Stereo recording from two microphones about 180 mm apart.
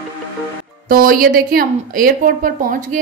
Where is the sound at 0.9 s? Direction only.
50° right (ahead or behind).